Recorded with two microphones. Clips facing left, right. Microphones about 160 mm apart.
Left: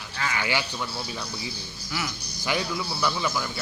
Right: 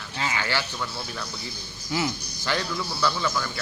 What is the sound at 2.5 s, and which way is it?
A man's voice, 10° left (ahead or behind).